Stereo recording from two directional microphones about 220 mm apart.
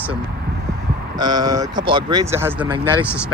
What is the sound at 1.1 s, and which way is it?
Speech, 20° right (ahead or behind).